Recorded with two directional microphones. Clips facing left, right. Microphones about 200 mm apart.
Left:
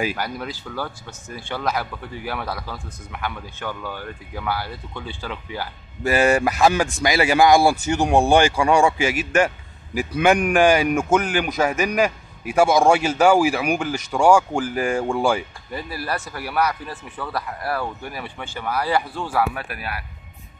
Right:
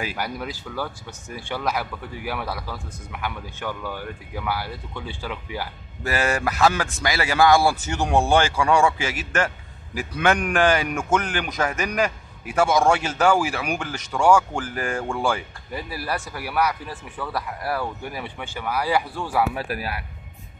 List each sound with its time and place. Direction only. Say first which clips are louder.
0.2 s speech: left 1 dB; 10° right (ahead or behind)
6.0 s a man's voice: left 6 dB; 15° left (ahead or behind)
15.7 s speech: left 1 dB; 10° right (ahead or behind)
19.5 s speech: right 3 dB; 35° right (ahead or behind)